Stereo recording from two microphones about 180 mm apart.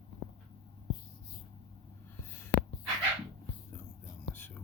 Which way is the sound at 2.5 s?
70° left (ahead or behind).